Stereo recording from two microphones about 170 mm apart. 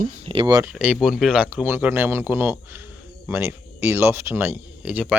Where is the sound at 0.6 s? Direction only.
5° right (ahead or behind).